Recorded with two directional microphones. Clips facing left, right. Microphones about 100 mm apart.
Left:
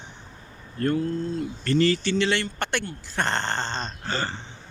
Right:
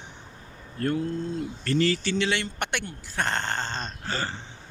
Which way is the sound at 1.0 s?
20° right (ahead or behind).